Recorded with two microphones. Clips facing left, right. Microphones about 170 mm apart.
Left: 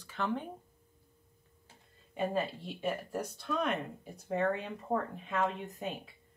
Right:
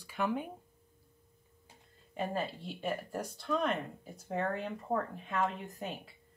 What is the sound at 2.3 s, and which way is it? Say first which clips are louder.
Speech: left 2 dB; centre (ahead or behind).